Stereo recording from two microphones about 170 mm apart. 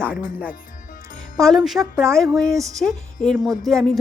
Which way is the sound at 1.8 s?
15° right (ahead or behind).